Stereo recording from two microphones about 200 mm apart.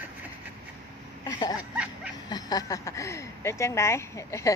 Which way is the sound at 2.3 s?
20° left (ahead or behind).